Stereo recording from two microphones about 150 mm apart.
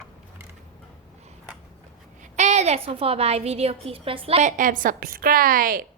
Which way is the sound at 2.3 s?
50° right (ahead or behind).